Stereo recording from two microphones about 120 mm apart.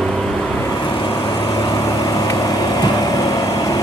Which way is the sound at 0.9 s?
40° left (ahead or behind).